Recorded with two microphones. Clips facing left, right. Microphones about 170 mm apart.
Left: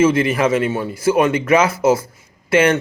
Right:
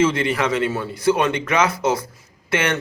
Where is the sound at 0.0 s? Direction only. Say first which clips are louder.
Left 4 dB; 25° left (ahead or behind).